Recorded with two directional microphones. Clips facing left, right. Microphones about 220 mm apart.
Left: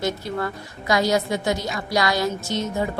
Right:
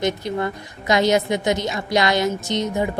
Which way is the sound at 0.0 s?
20° right (ahead or behind).